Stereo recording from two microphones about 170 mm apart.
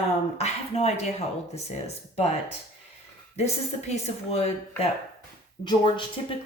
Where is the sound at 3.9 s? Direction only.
40° left (ahead or behind).